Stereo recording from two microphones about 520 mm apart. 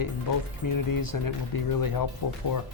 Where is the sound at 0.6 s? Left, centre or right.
Left.